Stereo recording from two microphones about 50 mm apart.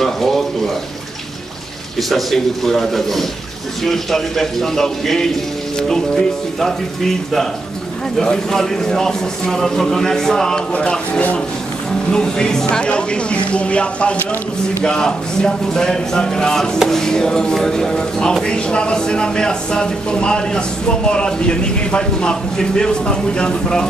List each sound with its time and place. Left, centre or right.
0.0 s frying: centre
2.0 s a man's voice: centre
10.7 s speech: left
12.1 s speech: centre